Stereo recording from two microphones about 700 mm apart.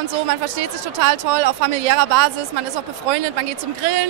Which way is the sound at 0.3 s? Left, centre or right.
Right.